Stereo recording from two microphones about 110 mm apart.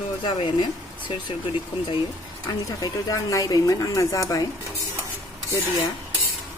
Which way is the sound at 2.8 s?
30° left (ahead or behind).